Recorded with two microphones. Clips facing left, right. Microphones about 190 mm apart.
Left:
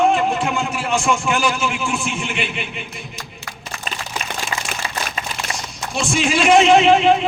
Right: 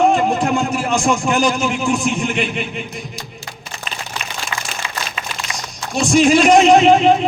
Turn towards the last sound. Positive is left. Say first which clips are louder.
# right 2 dB
turn(degrees=-40)  # may be behind; listen again after turning